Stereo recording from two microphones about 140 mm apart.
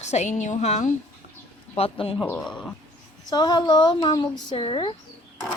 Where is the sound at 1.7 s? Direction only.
45° left (ahead or behind).